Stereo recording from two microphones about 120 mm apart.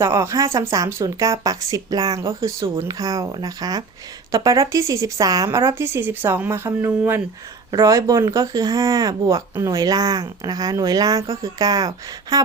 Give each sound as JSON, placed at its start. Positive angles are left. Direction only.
{"t": 0.0, "sound": "speech", "side_deg": -25}